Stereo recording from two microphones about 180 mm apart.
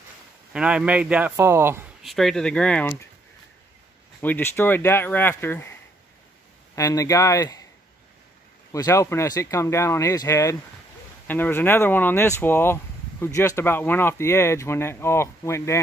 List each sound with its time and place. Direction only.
0.5 s a man's voice: 5° right (ahead or behind)
2.0 s speech: centre (ahead or behind)
4.2 s speech: 10° left (ahead or behind)
8.7 s speech: 15° left (ahead or behind)